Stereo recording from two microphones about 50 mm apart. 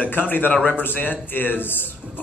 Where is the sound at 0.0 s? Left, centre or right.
Left.